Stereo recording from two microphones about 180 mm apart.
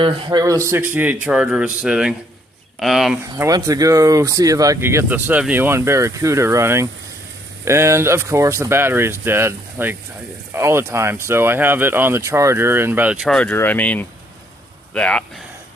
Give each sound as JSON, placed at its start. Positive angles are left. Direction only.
{"t": 0.0, "sound": "speech", "side_deg": -20}
{"t": 3.3, "sound": "speech", "side_deg": -15}
{"t": 13.2, "sound": "speech", "side_deg": 5}